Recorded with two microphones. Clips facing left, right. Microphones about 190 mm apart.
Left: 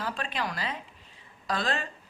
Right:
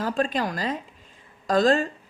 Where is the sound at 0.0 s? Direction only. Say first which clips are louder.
Right 8 dB; 45° right (ahead or behind).